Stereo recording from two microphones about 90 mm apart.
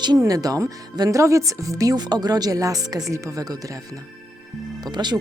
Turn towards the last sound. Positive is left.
turn(degrees=-50)  # may be behind; listen again after turning